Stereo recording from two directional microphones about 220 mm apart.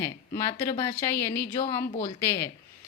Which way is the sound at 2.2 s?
10° left (ahead or behind).